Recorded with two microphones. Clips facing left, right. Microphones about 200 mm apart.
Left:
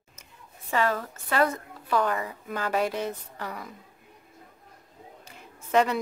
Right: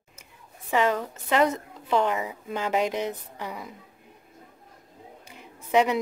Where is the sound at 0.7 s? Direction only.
15° right (ahead or behind).